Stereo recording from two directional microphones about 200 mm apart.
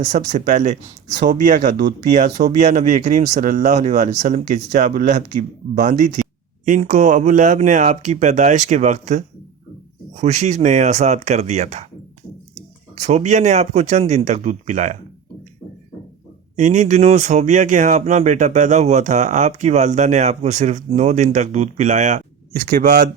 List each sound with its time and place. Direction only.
0.0 s speech: 40° right (ahead or behind)
13.0 s speech: 35° right (ahead or behind)
16.6 s speech: 35° right (ahead or behind)